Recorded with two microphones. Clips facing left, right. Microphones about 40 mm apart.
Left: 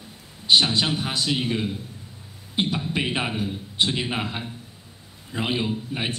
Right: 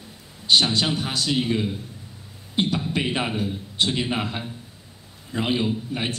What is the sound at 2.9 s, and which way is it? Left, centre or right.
A man's voice, centre.